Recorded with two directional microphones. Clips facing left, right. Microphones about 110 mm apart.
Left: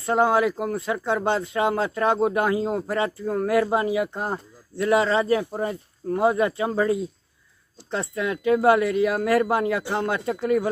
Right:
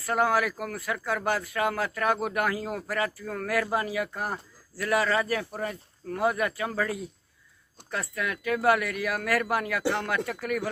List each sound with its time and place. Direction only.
0.0 s speech: 25° left (ahead or behind)